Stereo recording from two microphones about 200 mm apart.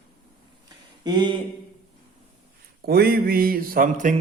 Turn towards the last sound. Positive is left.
turn(degrees=-40)  # may be behind; listen again after turning